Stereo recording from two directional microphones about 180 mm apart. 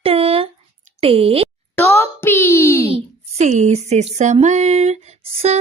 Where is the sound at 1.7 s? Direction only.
15° left (ahead or behind).